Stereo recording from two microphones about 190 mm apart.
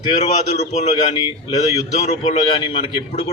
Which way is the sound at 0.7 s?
35° left (ahead or behind).